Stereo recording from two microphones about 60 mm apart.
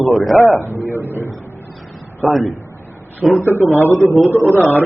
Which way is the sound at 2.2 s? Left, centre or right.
Centre.